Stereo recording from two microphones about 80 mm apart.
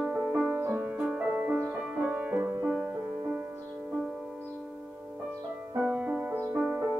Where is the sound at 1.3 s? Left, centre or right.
Right.